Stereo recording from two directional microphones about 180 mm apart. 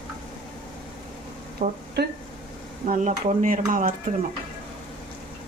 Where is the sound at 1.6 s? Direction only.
40° right (ahead or behind).